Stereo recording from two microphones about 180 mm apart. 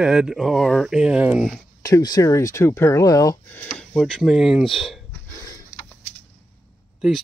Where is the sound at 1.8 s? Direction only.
20° left (ahead or behind).